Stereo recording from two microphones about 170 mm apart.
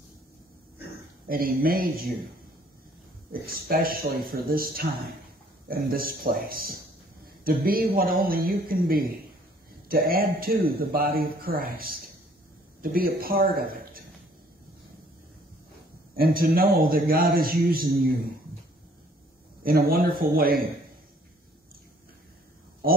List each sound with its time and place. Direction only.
1.2 s a man's voice: 60° right (ahead or behind)
3.3 s a man's voice: 60° right (ahead or behind)
16.2 s a man's voice: 60° right (ahead or behind)
19.6 s a man's voice: 65° right (ahead or behind)